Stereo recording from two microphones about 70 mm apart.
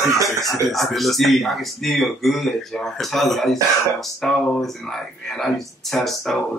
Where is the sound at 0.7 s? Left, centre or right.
Centre.